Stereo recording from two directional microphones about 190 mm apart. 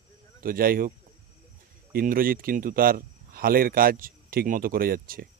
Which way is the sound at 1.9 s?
50° right (ahead or behind).